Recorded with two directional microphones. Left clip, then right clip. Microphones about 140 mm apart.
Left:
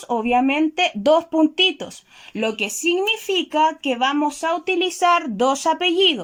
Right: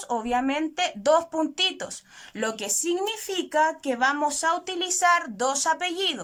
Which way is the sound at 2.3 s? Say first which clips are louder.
Left 5 dB; 5° left (ahead or behind).